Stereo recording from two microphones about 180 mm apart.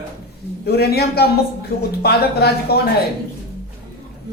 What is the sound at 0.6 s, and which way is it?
Speech, 60° left (ahead or behind).